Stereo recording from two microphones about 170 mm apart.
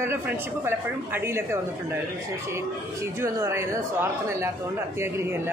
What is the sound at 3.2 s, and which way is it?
A man's voice, 15° right (ahead or behind).